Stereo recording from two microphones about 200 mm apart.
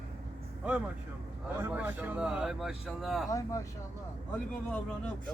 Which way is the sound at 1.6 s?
10° right (ahead or behind).